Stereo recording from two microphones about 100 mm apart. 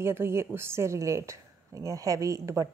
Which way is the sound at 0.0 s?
25° right (ahead or behind).